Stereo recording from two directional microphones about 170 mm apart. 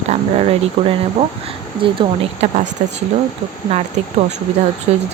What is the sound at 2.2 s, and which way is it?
Speech, 40° right (ahead or behind).